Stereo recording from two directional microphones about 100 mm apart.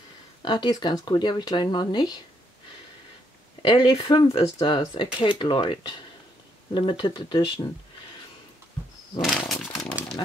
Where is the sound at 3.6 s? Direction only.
45° left (ahead or behind).